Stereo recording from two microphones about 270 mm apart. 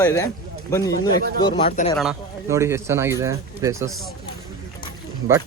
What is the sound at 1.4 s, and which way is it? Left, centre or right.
Speech, left.